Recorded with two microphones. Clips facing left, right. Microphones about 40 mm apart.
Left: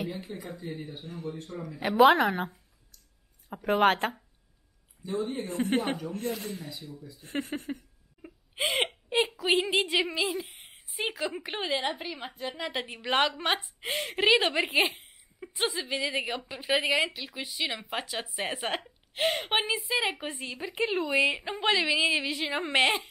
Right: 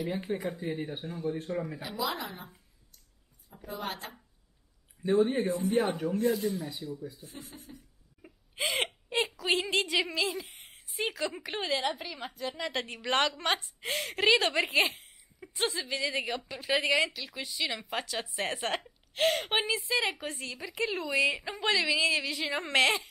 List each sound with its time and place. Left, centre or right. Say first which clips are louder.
0.4 s speech: right 4 dB; right
0.7 s speech: right 3 dB; right
1.8 s speech: left 14 dB; left
5.2 s speech: right 5 dB; right
5.5 s speech: even; left
8.8 s a woman's voice: left 3 dB; centre